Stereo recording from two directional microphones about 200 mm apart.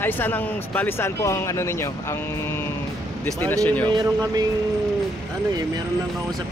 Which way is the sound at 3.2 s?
10° left (ahead or behind).